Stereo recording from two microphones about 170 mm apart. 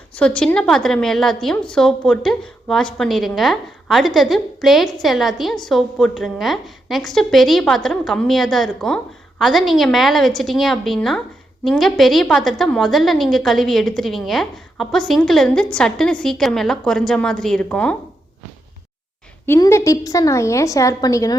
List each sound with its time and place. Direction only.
0.2 s a woman's voice: 5° left (ahead or behind)
19.5 s a woman's voice: 20° left (ahead or behind)